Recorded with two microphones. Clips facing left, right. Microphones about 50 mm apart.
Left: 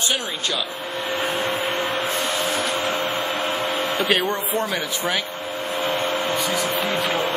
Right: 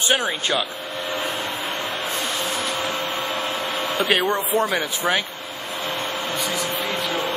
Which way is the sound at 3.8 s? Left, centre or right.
Centre.